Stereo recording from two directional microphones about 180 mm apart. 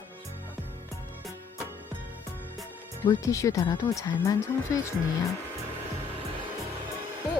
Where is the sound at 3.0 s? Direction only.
15° left (ahead or behind).